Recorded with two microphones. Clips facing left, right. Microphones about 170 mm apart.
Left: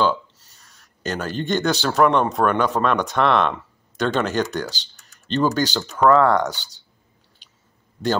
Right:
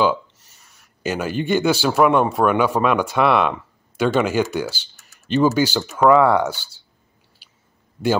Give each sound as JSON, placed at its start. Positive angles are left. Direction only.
{"t": 0.0, "sound": "speech", "side_deg": -10}
{"t": 6.5, "sound": "speech", "side_deg": 15}